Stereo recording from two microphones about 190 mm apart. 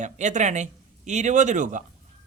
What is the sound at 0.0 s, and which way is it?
Speech, 40° right (ahead or behind).